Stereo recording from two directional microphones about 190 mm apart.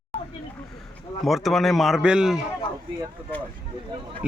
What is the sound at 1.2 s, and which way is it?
Speech, centre (ahead or behind).